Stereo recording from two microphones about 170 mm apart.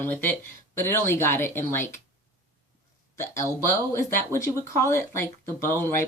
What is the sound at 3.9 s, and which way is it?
Speech, 15° left (ahead or behind).